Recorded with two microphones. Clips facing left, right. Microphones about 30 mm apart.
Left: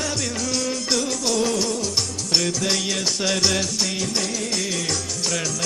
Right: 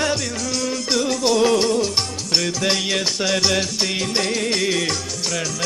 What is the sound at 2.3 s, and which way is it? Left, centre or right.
Music, centre.